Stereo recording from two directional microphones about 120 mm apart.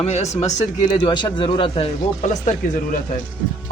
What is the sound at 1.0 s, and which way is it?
Speech, 40° left (ahead or behind).